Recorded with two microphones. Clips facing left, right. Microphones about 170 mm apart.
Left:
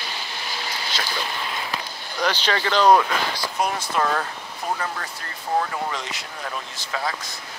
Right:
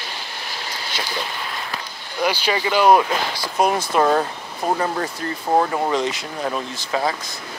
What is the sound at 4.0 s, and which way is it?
Speech, 25° right (ahead or behind).